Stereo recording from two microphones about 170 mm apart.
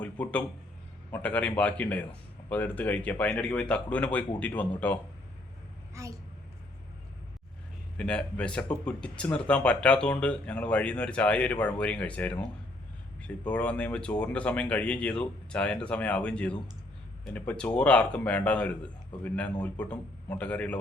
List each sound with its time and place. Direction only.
0.0 s a man's voice: 10° left (ahead or behind)
5.9 s a woman's voice: 20° right (ahead or behind)
7.9 s speech: 5° left (ahead or behind)